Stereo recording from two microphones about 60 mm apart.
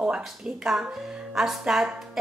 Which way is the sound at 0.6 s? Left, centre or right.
Centre.